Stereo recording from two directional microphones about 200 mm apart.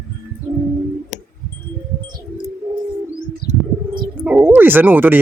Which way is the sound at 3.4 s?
50° left (ahead or behind).